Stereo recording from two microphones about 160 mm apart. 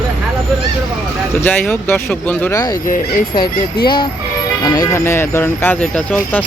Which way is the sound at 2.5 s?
25° left (ahead or behind).